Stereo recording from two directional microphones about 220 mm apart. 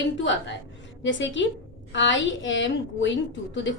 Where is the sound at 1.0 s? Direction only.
55° left (ahead or behind).